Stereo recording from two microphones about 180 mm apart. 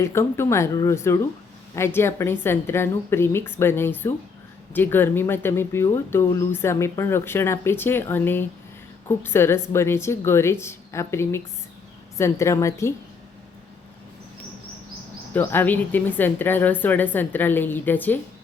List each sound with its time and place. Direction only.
0.0 s speech: 15° left (ahead or behind)
15.3 s speech: 10° left (ahead or behind)